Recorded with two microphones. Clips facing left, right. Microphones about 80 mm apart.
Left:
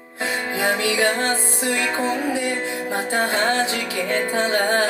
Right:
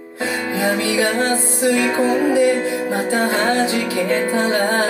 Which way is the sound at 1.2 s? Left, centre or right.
Right.